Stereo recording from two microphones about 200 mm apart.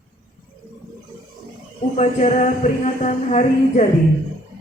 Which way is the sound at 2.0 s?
35° left (ahead or behind).